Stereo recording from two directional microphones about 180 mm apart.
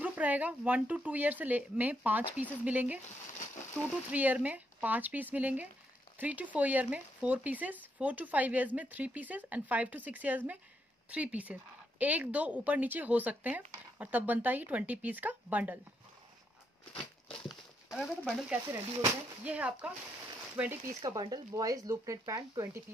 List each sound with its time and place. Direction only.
0.0 s speech: 10° right (ahead or behind)
4.1 s speech: 10° right (ahead or behind)
17.3 s a sound: centre (ahead or behind)
19.4 s speech: 5° right (ahead or behind)